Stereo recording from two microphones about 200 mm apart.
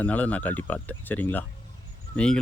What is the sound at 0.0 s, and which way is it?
Speech, 5° left (ahead or behind).